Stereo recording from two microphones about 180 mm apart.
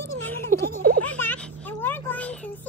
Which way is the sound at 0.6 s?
55° right (ahead or behind).